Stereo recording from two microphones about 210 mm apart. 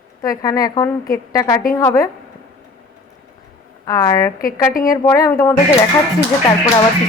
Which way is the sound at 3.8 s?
15° left (ahead or behind).